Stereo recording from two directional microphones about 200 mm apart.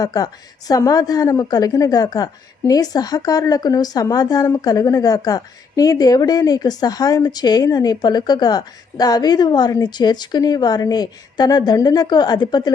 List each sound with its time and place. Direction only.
0.0 s a woman's voice: 20° left (ahead or behind)